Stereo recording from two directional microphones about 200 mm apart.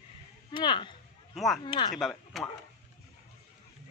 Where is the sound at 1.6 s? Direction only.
25° left (ahead or behind).